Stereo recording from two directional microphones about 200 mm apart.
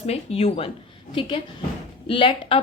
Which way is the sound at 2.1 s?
25° left (ahead or behind).